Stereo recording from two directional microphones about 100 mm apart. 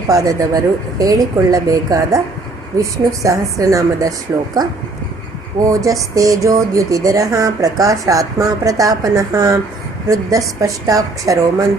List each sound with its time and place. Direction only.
0.1 s speech: 35° right (ahead or behind)
5.5 s speech: 35° right (ahead or behind)